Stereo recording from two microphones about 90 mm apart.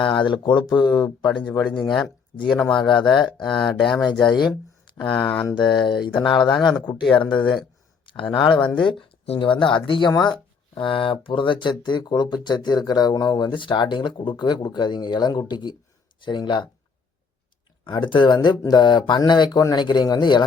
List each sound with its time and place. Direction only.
0.0 s speech: 65° left (ahead or behind)
2.5 s speech: 10° left (ahead or behind)
4.3 s speech: 55° left (ahead or behind)
5.1 s speech: 15° left (ahead or behind)
5.5 s speech: 60° left (ahead or behind)
6.5 s speech: 5° left (ahead or behind)
8.0 s speech: 70° left (ahead or behind)
10.1 s speech: 55° left (ahead or behind)
10.8 s speech: 70° left (ahead or behind)
17.9 s speech: 60° left (ahead or behind)